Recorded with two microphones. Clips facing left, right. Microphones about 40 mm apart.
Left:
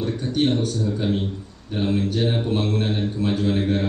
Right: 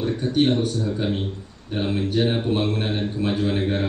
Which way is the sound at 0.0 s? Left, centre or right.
Centre.